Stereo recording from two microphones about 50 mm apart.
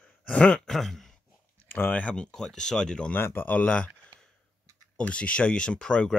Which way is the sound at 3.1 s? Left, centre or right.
Left.